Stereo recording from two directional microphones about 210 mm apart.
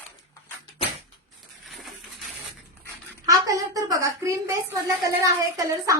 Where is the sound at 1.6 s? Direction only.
Centre (ahead or behind).